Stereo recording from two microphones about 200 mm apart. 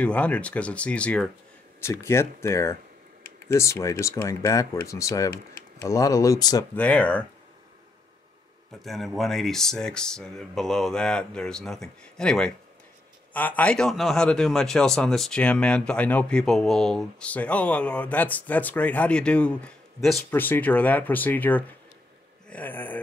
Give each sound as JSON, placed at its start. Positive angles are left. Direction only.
{"t": 0.0, "sound": "speech", "side_deg": 5}
{"t": 6.7, "sound": "speech", "side_deg": 5}
{"t": 8.8, "sound": "a man's voice", "side_deg": 0}